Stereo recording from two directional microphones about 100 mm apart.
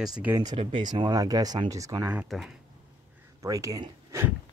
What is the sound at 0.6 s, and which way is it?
Speech, 60° right (ahead or behind).